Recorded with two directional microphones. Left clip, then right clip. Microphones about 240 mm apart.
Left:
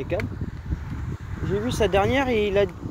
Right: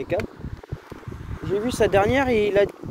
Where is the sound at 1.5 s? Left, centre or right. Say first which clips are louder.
Right 2 dB; right.